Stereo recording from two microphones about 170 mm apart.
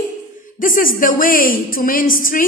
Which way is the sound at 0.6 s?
55° left (ahead or behind).